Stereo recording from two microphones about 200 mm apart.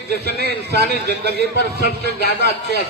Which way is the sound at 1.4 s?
55° left (ahead or behind).